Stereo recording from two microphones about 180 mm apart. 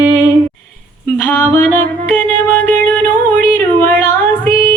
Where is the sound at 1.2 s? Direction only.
10° left (ahead or behind).